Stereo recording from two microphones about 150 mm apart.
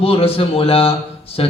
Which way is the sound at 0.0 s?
40° left (ahead or behind).